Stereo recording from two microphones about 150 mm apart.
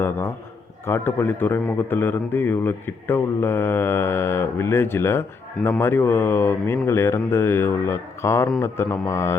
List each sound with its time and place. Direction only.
0.0 s a man's voice: 15° left (ahead or behind)